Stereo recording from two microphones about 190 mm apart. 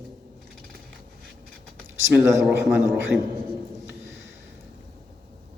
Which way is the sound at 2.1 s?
5° right (ahead or behind).